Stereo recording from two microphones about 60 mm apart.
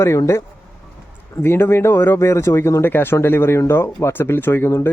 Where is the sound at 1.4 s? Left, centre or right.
Left.